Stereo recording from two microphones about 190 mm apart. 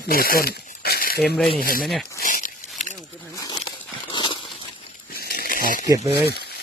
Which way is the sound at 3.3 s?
20° left (ahead or behind).